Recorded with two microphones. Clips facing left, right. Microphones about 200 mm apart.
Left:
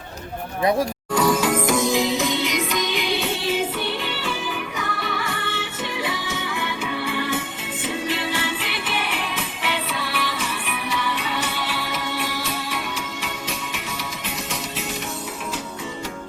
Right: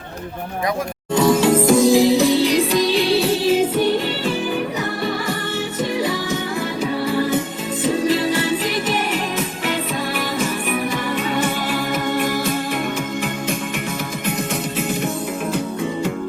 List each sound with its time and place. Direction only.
1.1 s music: 25° right (ahead or behind); by 12.8 s 50° right (ahead or behind)